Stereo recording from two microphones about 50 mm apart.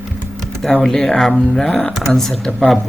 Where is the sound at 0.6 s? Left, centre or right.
Centre.